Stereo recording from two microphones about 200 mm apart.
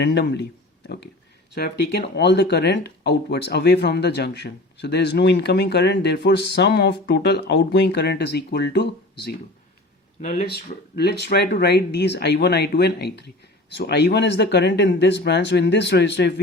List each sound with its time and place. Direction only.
0.0 s speech: 55° left (ahead or behind)
1.5 s speech: 55° left (ahead or behind)
10.2 s speech: 35° left (ahead or behind)
10.9 s speech: 55° left (ahead or behind)